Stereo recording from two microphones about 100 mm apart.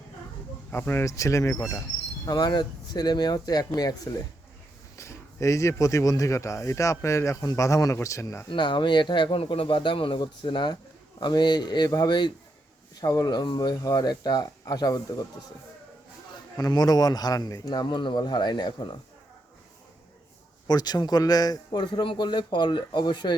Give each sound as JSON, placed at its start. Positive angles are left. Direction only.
{"t": 0.7, "sound": "speech", "side_deg": 20}
{"t": 2.2, "sound": "a man's voice", "side_deg": 45}
{"t": 4.9, "sound": "speech", "side_deg": 30}
{"t": 8.4, "sound": "a man's voice", "side_deg": 55}
{"t": 16.6, "sound": "a man's voice", "side_deg": 40}
{"t": 20.7, "sound": "speech", "side_deg": 40}
{"t": 22.0, "sound": "a man's voice", "side_deg": 55}